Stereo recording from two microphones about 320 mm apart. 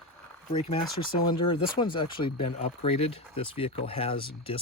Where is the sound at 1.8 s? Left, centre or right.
Centre.